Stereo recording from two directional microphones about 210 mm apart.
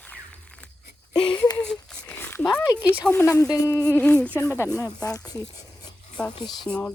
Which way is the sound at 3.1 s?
15° left (ahead or behind).